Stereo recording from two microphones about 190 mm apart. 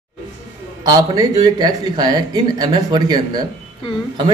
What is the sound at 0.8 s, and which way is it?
Speech, 20° right (ahead or behind).